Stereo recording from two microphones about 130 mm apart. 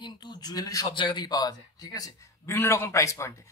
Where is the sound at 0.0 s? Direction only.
30° left (ahead or behind).